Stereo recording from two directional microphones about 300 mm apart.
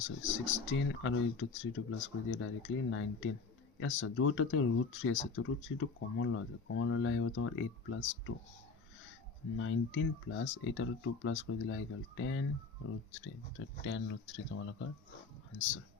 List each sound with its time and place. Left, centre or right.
0.0 s speech: left
9.6 s speech: left
13.7 s speech: left